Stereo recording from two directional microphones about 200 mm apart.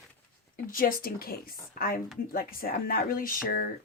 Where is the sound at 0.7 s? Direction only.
45° left (ahead or behind).